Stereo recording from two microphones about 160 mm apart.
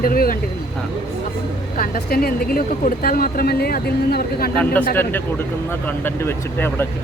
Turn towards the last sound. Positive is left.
turn(degrees=15)  # may be behind; listen again after turning